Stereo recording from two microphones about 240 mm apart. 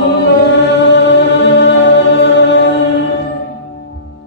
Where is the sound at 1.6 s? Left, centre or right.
Left.